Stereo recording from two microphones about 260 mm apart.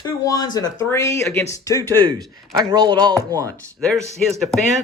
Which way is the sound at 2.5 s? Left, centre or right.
Centre.